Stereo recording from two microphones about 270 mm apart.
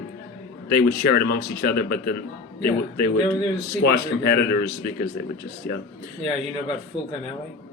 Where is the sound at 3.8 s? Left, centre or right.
Left.